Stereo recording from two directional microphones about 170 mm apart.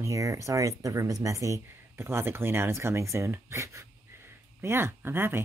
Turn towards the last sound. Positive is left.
turn(degrees=-15)  # may be behind; listen again after turning